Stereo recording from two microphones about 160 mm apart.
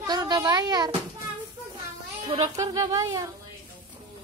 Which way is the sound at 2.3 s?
45° right (ahead or behind).